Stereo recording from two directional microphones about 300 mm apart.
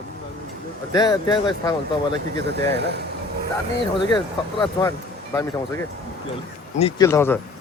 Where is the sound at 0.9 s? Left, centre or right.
Centre.